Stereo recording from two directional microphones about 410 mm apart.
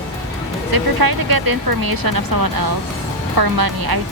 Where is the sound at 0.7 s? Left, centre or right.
Right.